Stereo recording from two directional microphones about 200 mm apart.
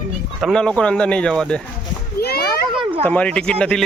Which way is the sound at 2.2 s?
50° left (ahead or behind).